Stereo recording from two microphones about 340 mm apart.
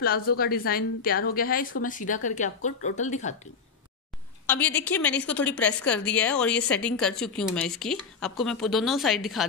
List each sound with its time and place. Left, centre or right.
0.4 s speech: left
4.5 s a woman's voice: centre